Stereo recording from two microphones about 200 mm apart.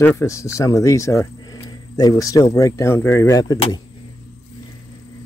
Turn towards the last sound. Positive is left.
turn(degrees=15)  # may be behind; listen again after turning